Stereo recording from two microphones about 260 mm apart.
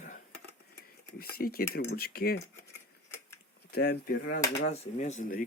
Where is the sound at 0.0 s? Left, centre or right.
Left.